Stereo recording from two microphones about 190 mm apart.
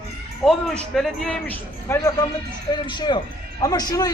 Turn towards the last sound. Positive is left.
turn(degrees=20)  # may be behind; listen again after turning